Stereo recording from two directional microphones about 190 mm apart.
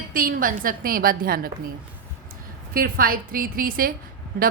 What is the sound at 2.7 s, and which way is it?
A woman's voice, 50° right (ahead or behind).